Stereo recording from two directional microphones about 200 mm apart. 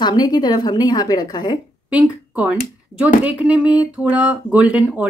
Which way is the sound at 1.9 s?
5° right (ahead or behind).